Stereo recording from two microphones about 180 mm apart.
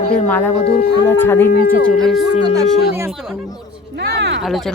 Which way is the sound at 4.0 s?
70° right (ahead or behind).